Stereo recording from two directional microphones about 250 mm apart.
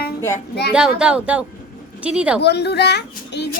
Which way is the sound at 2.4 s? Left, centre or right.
Left.